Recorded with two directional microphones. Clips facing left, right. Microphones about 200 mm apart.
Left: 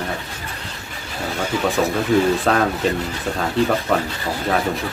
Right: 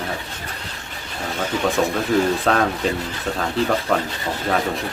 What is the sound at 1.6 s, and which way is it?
Speech, centre (ahead or behind).